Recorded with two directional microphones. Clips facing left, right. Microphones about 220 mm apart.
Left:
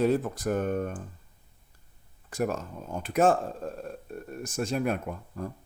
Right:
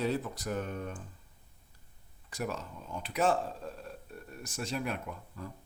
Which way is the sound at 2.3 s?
50° left (ahead or behind).